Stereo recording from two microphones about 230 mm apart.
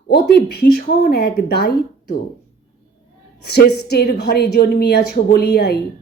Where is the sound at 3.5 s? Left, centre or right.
Left.